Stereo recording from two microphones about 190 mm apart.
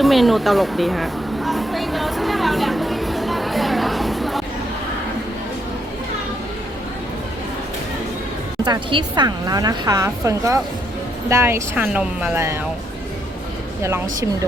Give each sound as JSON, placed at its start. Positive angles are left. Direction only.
{"t": 0.0, "sound": "a sound", "side_deg": 0}
{"t": 8.6, "sound": "a woman's voice", "side_deg": -25}
{"t": 13.8, "sound": "speech", "side_deg": -15}